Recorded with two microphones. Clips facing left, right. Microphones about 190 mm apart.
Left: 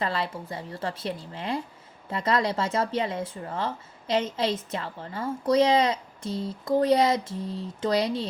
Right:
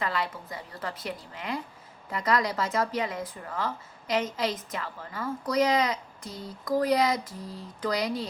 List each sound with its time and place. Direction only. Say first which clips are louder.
0.0 s speech: left 2 dB; 30° left (ahead or behind)